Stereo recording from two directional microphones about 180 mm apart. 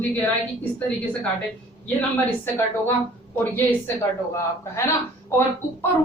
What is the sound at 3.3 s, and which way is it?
Speech, 10° left (ahead or behind).